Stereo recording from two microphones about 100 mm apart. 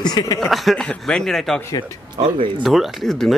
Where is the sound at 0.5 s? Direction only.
5° left (ahead or behind).